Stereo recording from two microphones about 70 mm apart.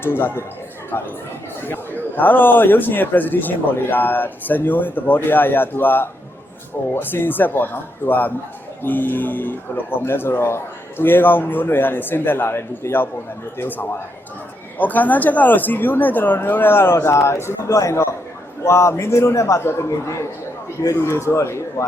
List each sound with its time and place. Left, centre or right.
0.0 s a man's voice: left
17.7 s a man's voice: left